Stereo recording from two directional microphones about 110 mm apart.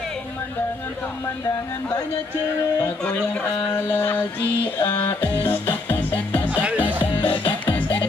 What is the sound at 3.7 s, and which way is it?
Music, 20° left (ahead or behind).